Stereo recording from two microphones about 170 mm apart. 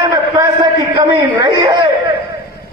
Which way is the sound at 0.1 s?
25° right (ahead or behind).